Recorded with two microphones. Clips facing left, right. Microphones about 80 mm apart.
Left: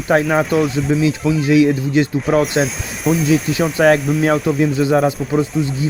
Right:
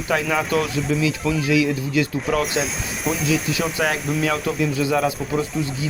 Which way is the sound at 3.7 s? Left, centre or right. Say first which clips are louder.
Left 13 dB; left.